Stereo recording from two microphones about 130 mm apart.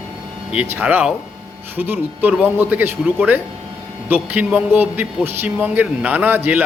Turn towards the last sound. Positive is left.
turn(degrees=-15)  # may be behind; listen again after turning